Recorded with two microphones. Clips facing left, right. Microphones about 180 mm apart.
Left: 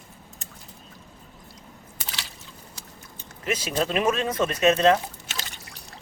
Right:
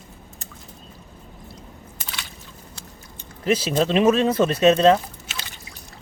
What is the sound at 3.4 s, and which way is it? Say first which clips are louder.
Speech: right 6 dB; 30° right (ahead or behind).